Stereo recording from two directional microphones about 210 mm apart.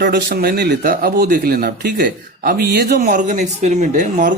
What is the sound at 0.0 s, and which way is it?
Speech, 50° right (ahead or behind).